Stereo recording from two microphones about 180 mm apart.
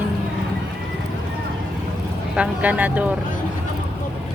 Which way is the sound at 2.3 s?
5° right (ahead or behind).